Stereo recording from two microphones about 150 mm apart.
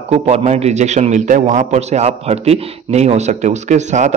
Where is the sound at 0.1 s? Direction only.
45° right (ahead or behind).